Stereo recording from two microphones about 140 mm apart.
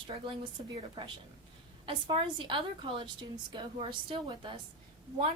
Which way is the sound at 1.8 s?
35° right (ahead or behind).